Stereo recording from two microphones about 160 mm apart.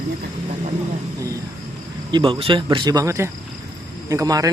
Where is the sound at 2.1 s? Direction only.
30° right (ahead or behind).